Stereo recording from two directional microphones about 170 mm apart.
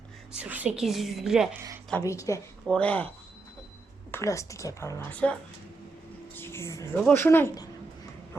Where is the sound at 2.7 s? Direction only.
10° left (ahead or behind).